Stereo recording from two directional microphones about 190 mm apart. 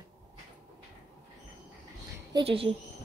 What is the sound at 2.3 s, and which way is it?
Speech, 30° right (ahead or behind).